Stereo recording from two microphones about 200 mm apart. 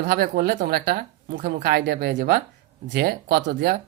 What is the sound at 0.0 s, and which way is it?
A man's voice, 50° right (ahead or behind).